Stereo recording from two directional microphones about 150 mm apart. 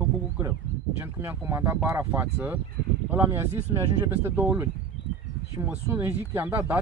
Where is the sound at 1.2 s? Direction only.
15° right (ahead or behind).